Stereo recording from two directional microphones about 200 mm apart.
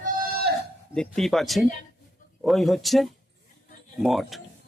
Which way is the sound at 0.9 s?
Centre (ahead or behind).